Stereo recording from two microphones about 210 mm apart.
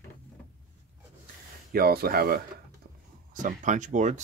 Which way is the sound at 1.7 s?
45° right (ahead or behind).